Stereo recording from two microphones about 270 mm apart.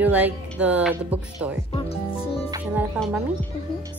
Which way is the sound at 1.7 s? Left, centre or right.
Left.